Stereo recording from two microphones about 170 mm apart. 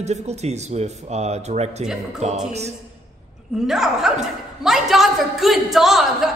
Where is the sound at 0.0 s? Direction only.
40° right (ahead or behind).